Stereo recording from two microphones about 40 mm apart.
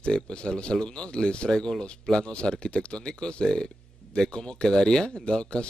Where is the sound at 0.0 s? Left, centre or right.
Left.